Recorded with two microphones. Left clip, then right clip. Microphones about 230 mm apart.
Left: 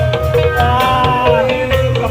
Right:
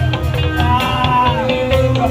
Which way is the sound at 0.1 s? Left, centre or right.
Left.